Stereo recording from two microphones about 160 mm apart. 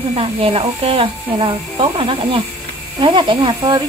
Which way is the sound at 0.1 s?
35° right (ahead or behind).